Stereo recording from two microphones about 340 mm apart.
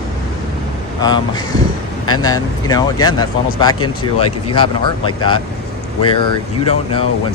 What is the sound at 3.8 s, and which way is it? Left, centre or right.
Speech, left.